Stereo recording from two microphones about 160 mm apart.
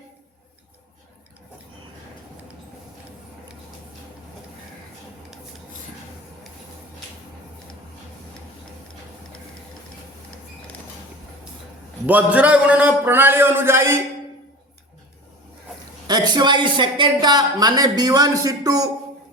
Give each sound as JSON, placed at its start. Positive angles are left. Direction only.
{"t": 12.0, "sound": "a man's voice", "side_deg": -10}
{"t": 16.0, "sound": "speech", "side_deg": -25}